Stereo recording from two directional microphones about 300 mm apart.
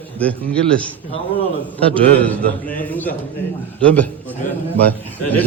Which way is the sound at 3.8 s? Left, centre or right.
Centre.